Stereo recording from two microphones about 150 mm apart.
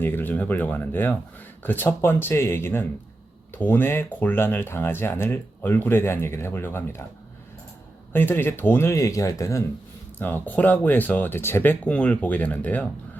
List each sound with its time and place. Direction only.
0.0 s speech: 15° left (ahead or behind)
8.1 s speech: 15° left (ahead or behind)